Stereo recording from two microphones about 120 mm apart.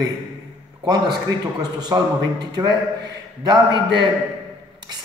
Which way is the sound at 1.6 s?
35° right (ahead or behind).